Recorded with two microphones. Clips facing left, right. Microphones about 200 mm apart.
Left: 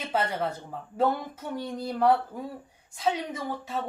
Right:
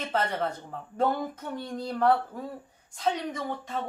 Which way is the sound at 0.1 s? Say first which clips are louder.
Left 1 dB; 10° left (ahead or behind).